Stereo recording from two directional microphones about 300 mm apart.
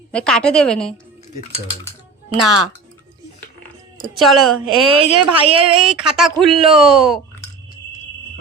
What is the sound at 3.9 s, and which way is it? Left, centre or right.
Speech, centre.